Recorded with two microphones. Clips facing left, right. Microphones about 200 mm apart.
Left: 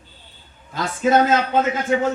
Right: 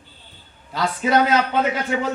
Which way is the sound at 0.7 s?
50° left (ahead or behind).